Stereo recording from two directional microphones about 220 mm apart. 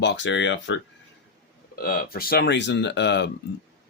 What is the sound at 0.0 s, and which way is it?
Speech, 50° left (ahead or behind).